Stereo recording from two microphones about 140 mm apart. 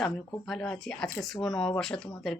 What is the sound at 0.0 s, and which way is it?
Speech, centre (ahead or behind).